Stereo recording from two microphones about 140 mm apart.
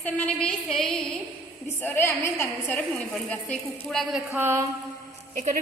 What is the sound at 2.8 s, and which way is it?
A woman's voice, 5° left (ahead or behind).